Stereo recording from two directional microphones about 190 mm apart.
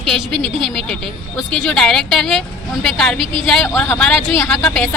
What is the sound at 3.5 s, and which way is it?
Speech, 5° left (ahead or behind).